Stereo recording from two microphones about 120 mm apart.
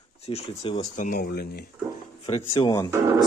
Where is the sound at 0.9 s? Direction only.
90° left.